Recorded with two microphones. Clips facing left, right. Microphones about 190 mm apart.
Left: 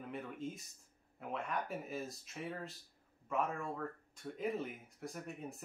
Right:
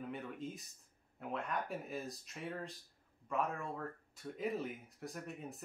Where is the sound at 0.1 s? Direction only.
Centre (ahead or behind).